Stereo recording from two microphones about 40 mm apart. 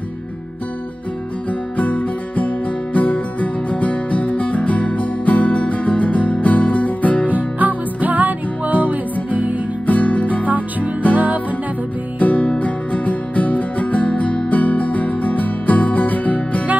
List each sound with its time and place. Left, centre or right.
1.8 s music: left
7.2 s music: right
9.8 s music: left
11.1 s music: right
12.2 s music: left